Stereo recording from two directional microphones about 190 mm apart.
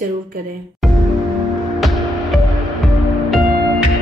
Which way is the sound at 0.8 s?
Centre (ahead or behind).